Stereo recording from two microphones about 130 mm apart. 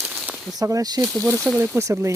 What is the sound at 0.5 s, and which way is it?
Speech, 25° right (ahead or behind).